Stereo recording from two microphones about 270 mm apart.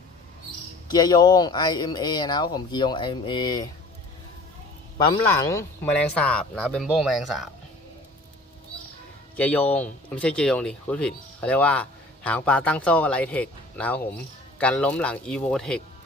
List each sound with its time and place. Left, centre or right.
0.9 s speech: centre
5.1 s speech: centre
9.3 s speech: centre